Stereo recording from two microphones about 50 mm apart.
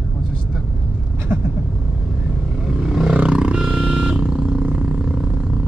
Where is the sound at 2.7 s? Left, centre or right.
Centre.